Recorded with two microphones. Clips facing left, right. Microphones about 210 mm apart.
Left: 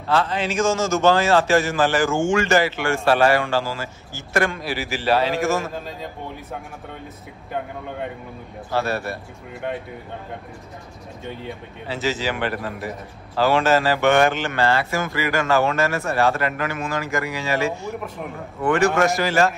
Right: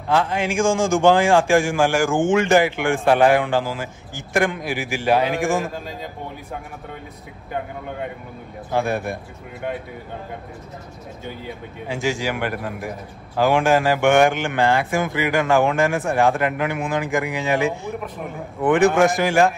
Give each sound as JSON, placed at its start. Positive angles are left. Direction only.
{"t": 0.1, "sound": "a man's voice", "side_deg": -15}
{"t": 8.7, "sound": "a man's voice", "side_deg": -15}
{"t": 11.9, "sound": "a man's voice", "side_deg": -15}